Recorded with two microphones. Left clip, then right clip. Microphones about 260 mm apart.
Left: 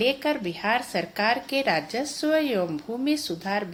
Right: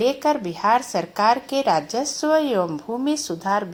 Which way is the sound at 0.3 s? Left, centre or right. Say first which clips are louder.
Right 6 dB; centre.